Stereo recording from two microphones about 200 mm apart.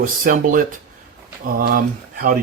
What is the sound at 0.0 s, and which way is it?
Speech, 45° right (ahead or behind).